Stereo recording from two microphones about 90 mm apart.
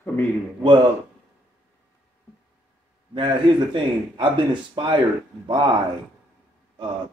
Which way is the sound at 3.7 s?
65° right (ahead or behind).